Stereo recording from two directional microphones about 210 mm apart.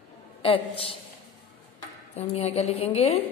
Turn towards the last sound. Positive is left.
turn(degrees=30)  # may be behind; listen again after turning